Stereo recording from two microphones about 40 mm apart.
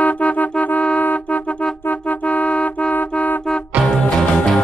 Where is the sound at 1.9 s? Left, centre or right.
Left.